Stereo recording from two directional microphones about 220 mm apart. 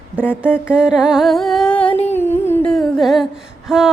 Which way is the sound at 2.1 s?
10° left (ahead or behind).